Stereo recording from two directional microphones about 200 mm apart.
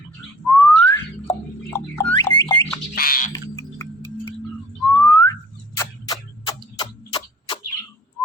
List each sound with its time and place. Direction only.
0.4 s whistling: 10° left (ahead or behind)
2.9 s frog: 45° left (ahead or behind)
3.3 s frog: 15° left (ahead or behind)
4.9 s whistling: 10° left (ahead or behind)
6.7 s tick-tock: 25° left (ahead or behind)